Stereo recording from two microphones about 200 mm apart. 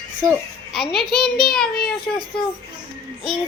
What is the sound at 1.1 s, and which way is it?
Speech, 50° left (ahead or behind).